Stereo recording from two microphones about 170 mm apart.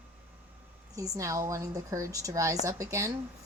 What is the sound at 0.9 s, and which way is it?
A woman's voice, 20° right (ahead or behind).